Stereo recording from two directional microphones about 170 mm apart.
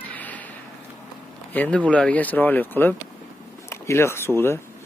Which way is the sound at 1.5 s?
10° left (ahead or behind).